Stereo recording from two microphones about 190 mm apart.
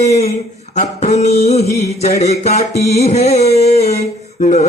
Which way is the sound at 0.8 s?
40° left (ahead or behind).